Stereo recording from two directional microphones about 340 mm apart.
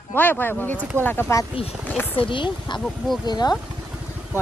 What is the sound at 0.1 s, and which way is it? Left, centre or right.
Speech, centre.